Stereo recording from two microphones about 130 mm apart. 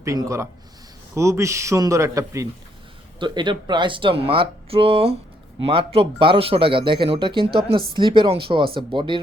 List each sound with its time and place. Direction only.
0.0 s speech: 25° right (ahead or behind)
3.2 s speech: 35° right (ahead or behind)